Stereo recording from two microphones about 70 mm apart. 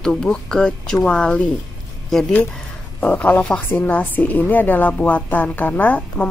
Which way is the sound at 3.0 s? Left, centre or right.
Centre.